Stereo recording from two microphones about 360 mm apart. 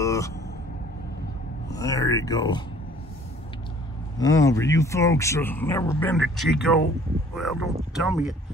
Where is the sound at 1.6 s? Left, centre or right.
Centre.